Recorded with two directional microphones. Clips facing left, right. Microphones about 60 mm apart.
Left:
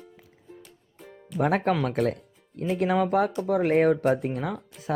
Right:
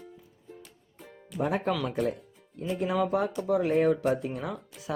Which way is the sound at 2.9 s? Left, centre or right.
Left.